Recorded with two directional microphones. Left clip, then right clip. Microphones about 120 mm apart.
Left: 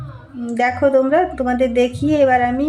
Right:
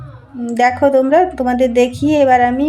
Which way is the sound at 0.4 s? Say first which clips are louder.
Right 4 dB; 25° right (ahead or behind).